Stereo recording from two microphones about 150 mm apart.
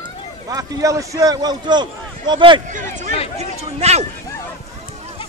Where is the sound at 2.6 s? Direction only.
55° right (ahead or behind).